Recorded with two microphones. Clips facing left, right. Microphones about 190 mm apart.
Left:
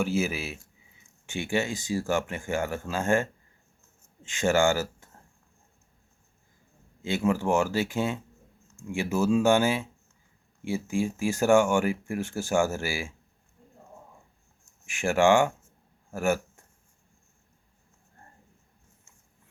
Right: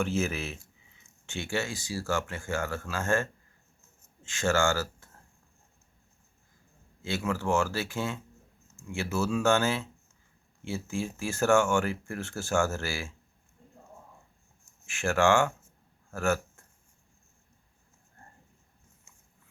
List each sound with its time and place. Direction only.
0.0 s speech: 10° left (ahead or behind)
7.0 s speech: 15° left (ahead or behind)
14.8 s speech: 15° left (ahead or behind)